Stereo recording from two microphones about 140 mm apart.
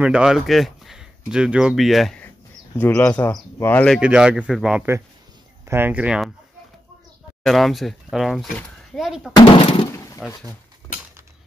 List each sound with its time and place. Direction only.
0.0 s speech: 5° right (ahead or behind)
2.8 s speech: 10° left (ahead or behind)
4.0 s speech: 5° right (ahead or behind)
5.7 s speech: 15° right (ahead or behind)
7.4 s speech: centre (ahead or behind)
9.3 s speech: 40° left (ahead or behind)
10.2 s speech: centre (ahead or behind)